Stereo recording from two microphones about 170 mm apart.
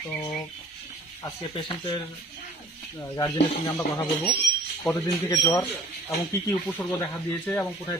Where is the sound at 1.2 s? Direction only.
25° left (ahead or behind).